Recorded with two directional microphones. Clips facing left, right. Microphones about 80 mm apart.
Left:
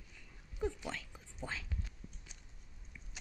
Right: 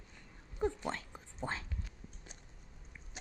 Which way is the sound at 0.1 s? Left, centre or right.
Right.